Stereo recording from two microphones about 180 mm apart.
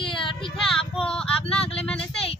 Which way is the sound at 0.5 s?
Centre (ahead or behind).